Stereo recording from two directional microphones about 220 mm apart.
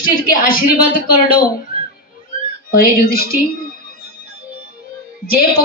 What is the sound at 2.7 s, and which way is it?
Speech, 40° left (ahead or behind).